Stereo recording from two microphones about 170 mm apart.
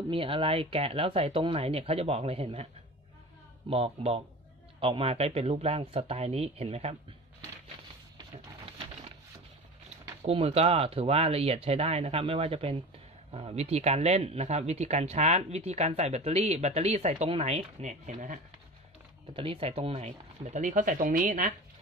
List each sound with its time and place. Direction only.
0.1 s speech: 30° right (ahead or behind)
3.7 s speech: 35° right (ahead or behind)
10.2 s speech: 35° right (ahead or behind)
19.3 s speech: 30° right (ahead or behind); by 21.5 s 50° right (ahead or behind)